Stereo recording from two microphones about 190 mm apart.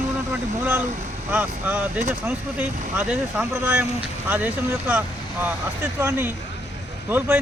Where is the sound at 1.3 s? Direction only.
10° right (ahead or behind).